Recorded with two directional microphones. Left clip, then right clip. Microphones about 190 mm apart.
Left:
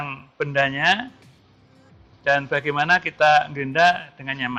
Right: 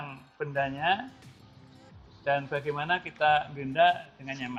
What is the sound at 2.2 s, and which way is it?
Speech, 50° left (ahead or behind).